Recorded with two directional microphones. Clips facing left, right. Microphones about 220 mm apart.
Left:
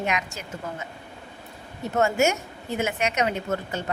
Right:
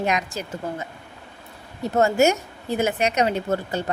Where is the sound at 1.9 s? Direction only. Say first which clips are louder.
Right 4 dB; 35° right (ahead or behind).